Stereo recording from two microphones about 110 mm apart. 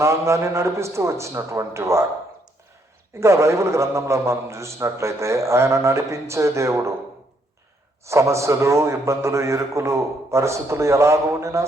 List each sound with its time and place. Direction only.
0.0 s a man's voice: 25° right (ahead or behind)
3.2 s a man's voice: 25° right (ahead or behind)
8.0 s a man's voice: 25° right (ahead or behind)